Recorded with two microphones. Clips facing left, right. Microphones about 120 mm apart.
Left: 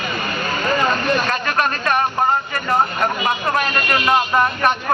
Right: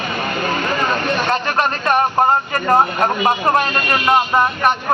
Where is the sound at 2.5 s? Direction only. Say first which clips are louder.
Right 4 dB; 40° right (ahead or behind); by 4.1 s 25° right (ahead or behind).